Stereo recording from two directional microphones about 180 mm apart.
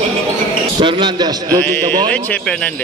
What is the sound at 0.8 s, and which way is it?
A man's voice, 25° right (ahead or behind).